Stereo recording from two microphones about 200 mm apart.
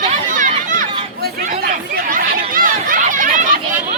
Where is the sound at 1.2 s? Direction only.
50° right (ahead or behind).